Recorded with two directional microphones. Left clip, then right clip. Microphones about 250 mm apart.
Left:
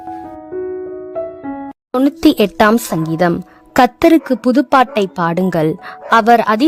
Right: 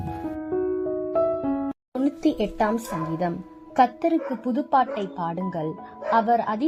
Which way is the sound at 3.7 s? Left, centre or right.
Left.